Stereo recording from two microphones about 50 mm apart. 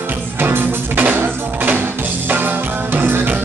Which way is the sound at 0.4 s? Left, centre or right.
Right.